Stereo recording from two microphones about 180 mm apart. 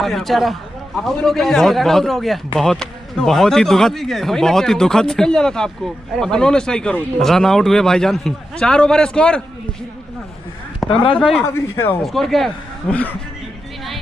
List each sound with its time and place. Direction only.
0.0 s speech: centre (ahead or behind)
10.9 s speech: 30° left (ahead or behind)
11.1 s speech: centre (ahead or behind)